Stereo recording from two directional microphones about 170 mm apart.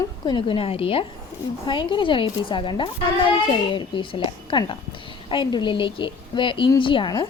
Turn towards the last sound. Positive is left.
turn(degrees=25)  # may be behind; listen again after turning